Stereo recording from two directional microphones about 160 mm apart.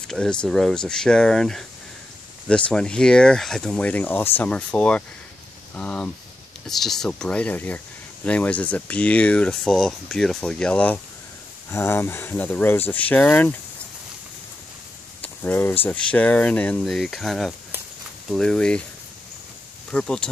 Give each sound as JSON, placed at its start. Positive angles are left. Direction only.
{"t": 0.1, "sound": "speech", "side_deg": 5}
{"t": 15.2, "sound": "speech", "side_deg": 10}
{"t": 19.9, "sound": "speech", "side_deg": 5}